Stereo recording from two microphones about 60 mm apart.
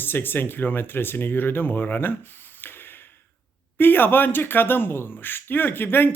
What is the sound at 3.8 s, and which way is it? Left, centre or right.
Speech, left.